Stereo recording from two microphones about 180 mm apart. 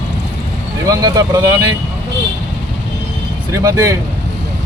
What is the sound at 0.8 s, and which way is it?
Speech, 20° right (ahead or behind).